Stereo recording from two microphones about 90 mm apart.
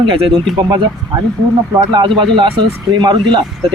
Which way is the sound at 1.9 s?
65° right (ahead or behind).